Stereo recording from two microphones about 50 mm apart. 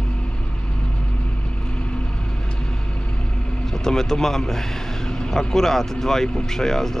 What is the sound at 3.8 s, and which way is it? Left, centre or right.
Speech, centre.